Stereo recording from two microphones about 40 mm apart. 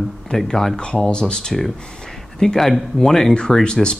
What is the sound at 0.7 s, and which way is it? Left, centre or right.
Speech, left.